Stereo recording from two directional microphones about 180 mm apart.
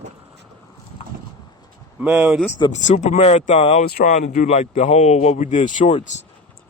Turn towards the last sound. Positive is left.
turn(degrees=40)  # may be behind; listen again after turning